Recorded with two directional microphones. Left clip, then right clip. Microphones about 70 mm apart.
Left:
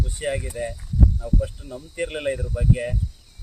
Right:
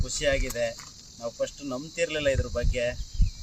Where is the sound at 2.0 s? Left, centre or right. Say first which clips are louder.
Even; centre.